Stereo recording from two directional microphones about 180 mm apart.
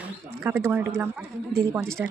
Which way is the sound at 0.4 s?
10° right (ahead or behind).